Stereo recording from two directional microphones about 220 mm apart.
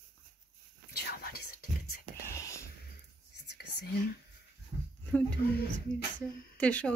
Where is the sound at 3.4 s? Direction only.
45° left (ahead or behind).